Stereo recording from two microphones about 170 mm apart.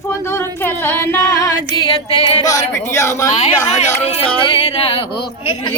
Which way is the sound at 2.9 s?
15° left (ahead or behind).